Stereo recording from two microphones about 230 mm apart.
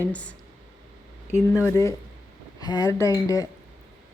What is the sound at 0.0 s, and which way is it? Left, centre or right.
Speech, centre.